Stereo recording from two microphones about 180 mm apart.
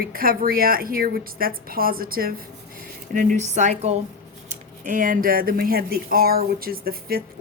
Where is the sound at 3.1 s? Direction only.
45° right (ahead or behind).